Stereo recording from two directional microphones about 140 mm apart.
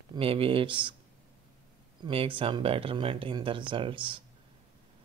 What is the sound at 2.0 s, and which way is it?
Speech, 40° right (ahead or behind).